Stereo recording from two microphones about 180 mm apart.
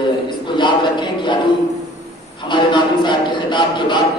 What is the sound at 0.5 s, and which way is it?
Speech, 25° left (ahead or behind).